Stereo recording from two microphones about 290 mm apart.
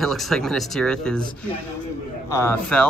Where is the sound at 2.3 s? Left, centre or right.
Centre.